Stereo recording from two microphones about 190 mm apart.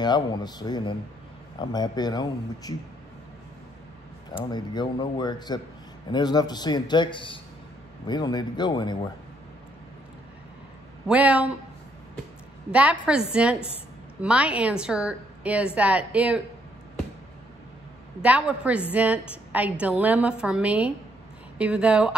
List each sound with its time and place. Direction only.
0.0 s a man's voice: 20° left (ahead or behind)
4.5 s a man's voice: 20° left (ahead or behind)
11.1 s a woman's voice: 5° right (ahead or behind)
12.7 s a woman's voice: 5° right (ahead or behind)
18.2 s a woman's voice: 5° right (ahead or behind)